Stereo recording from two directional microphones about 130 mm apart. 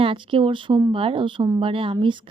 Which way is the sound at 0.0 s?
40° right (ahead or behind).